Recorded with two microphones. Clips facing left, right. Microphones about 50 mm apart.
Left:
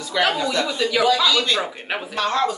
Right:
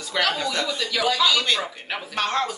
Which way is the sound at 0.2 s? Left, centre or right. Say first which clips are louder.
Left 4 dB; left.